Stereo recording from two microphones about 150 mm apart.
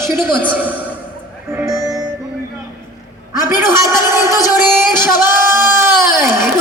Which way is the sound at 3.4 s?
20° right (ahead or behind).